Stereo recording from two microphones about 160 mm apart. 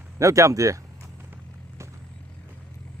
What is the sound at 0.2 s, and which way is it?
Speech, 20° right (ahead or behind).